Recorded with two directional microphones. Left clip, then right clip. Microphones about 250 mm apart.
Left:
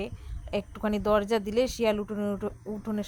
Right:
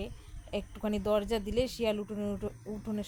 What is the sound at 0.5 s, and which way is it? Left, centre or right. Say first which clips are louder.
Speech: left 5 dB; centre.